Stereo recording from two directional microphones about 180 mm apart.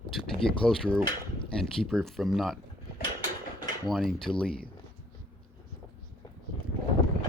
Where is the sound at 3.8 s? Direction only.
Centre (ahead or behind).